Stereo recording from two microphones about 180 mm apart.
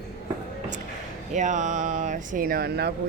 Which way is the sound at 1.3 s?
45° right (ahead or behind).